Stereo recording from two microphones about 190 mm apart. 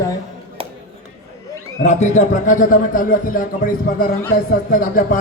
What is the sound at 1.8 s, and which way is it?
A man's voice, 40° left (ahead or behind).